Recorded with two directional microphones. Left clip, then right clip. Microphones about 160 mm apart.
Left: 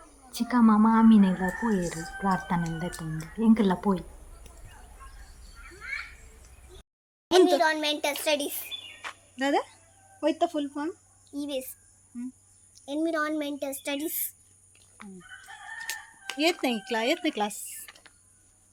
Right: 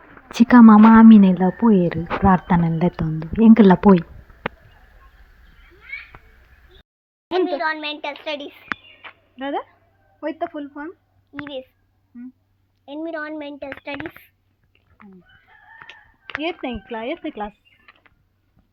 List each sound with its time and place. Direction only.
0.3 s speech: 45° right (ahead or behind)
7.3 s a sound: 15° left (ahead or behind)
8.2 s a child's voice: 15° left (ahead or behind)
11.3 s a child's voice: 15° left (ahead or behind)
12.7 s speech: 20° left (ahead or behind)
16.4 s speech: 5° right (ahead or behind)